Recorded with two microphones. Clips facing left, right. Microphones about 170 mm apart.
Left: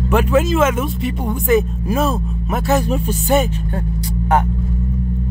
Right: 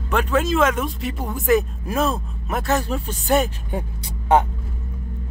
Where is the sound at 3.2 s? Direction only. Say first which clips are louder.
Left 1 dB; centre (ahead or behind).